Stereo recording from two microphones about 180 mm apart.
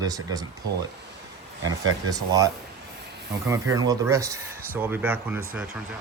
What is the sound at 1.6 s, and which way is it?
Speech, 20° right (ahead or behind).